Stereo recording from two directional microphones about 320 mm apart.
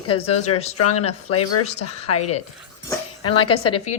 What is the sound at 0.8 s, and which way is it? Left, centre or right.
Speech, left.